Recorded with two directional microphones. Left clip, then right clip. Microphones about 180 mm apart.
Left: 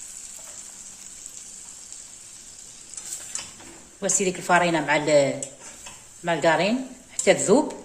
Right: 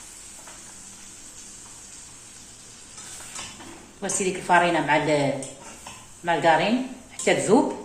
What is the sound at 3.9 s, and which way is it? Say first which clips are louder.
A woman's voice: left 2 dB; 70° left (ahead or behind).